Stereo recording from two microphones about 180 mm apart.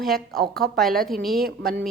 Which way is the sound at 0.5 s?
60° right (ahead or behind).